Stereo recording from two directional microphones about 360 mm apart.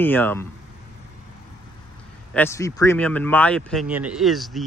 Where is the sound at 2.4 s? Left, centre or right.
Centre.